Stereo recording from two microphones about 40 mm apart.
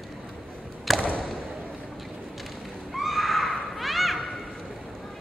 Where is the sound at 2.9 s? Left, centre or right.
Centre.